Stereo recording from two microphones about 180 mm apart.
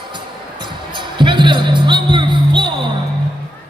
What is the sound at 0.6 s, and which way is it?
Music, 25° right (ahead or behind).